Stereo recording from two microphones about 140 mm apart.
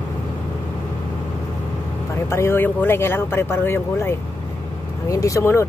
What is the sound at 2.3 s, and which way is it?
Speech, 15° left (ahead or behind).